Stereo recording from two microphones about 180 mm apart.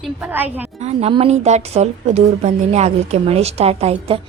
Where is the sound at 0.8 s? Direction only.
35° right (ahead or behind).